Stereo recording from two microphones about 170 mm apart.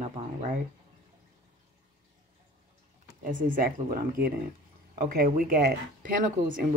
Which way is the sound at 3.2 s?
55° right (ahead or behind).